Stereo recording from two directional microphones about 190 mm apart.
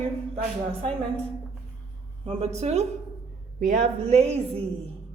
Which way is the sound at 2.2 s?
30° right (ahead or behind).